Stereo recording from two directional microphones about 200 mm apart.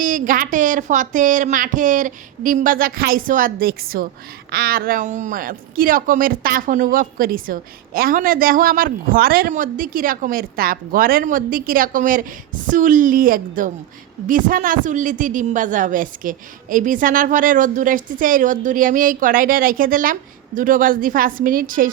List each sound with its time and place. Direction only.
0.0 s a woman's voice: 40° right (ahead or behind)